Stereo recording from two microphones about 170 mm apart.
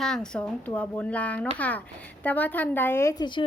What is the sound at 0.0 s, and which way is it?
A woman's voice, 5° left (ahead or behind).